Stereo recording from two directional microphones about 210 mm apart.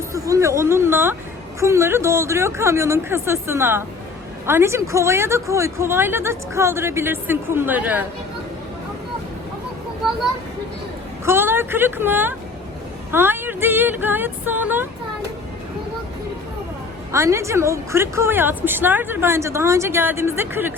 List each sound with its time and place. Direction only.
0.1 s a woman's voice: 15° right (ahead or behind)
11.3 s a woman's voice: 10° right (ahead or behind)
13.1 s a sound: 10° right (ahead or behind)
17.1 s a woman's voice: 15° right (ahead or behind)